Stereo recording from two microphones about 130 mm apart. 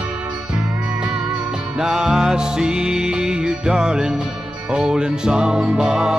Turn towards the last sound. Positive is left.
turn(degrees=-5)  # may be behind; listen again after turning